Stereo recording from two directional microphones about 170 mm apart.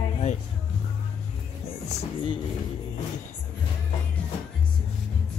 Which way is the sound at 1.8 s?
35° left (ahead or behind).